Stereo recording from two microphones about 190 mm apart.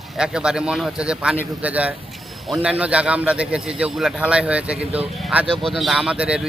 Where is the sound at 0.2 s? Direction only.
5° right (ahead or behind).